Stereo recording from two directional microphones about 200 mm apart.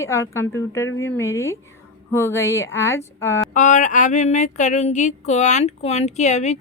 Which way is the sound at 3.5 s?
40° left (ahead or behind).